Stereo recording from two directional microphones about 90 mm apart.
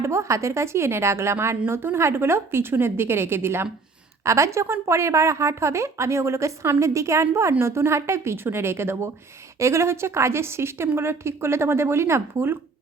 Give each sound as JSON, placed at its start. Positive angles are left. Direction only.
{"t": 0.0, "sound": "a woman's voice", "side_deg": -30}